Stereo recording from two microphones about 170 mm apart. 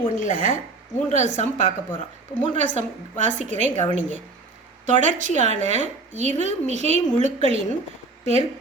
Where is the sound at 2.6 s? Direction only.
45° right (ahead or behind).